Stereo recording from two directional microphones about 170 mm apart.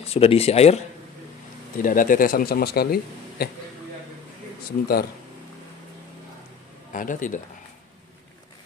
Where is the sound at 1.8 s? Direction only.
50° left (ahead or behind).